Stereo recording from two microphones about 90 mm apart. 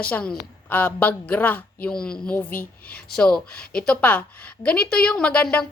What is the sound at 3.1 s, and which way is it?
A woman's voice, 10° left (ahead or behind).